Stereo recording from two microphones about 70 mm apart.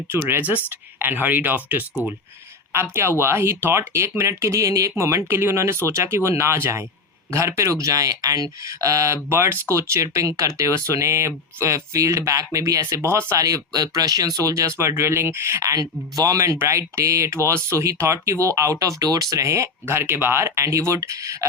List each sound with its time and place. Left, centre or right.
0.1 s speech: right
2.9 s speech: right
13.4 s speech: right
14.8 s speech: right
16.6 s speech: right
19.8 s speech: right